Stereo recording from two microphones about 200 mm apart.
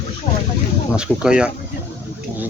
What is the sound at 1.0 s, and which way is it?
Speech, 5° right (ahead or behind).